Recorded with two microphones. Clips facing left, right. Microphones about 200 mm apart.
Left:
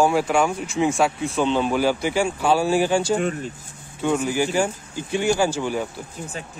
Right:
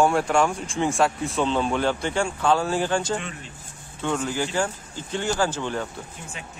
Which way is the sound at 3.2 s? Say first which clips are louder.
Left 12 dB; 45° left (ahead or behind).